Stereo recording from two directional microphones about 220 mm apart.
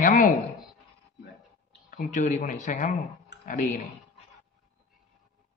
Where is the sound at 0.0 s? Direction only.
35° left (ahead or behind).